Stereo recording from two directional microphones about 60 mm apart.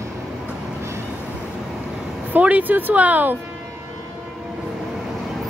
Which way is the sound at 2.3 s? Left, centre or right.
Right.